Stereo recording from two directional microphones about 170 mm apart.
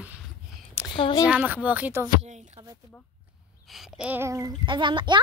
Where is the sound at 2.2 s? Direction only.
40° right (ahead or behind).